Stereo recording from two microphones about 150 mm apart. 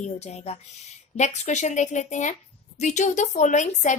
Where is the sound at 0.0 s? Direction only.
50° left (ahead or behind).